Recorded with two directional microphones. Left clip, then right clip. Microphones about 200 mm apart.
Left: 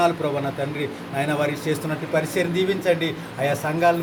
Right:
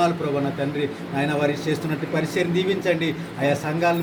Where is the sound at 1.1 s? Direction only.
50° left (ahead or behind).